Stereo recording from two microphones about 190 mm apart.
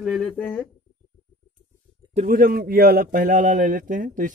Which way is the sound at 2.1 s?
50° right (ahead or behind).